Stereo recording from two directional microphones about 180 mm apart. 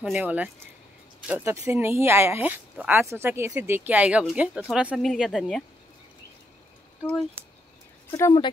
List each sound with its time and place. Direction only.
0.0 s speech: 5° right (ahead or behind)
8.1 s speech: 20° left (ahead or behind)